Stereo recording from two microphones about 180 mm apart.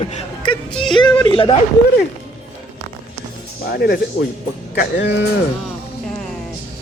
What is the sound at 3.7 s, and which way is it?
Speech, 60° left (ahead or behind).